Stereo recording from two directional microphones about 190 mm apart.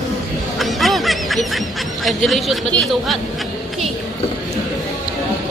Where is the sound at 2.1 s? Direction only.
Centre (ahead or behind).